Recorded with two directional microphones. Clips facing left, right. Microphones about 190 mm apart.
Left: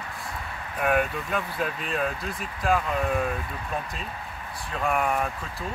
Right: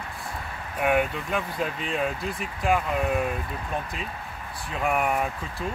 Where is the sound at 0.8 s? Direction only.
5° right (ahead or behind).